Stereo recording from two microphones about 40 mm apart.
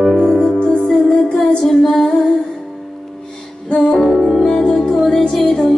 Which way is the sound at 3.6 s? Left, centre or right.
Left.